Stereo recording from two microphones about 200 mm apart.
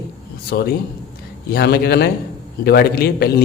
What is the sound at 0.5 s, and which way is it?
A man's voice, 50° left (ahead or behind).